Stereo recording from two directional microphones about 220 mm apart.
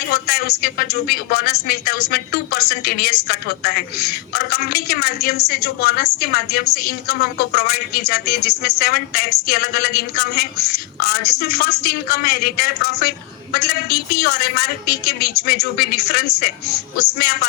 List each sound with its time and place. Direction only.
0.1 s a woman's voice: 45° left (ahead or behind)